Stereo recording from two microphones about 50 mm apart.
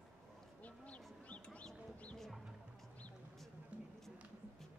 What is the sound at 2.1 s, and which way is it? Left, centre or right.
Music, centre.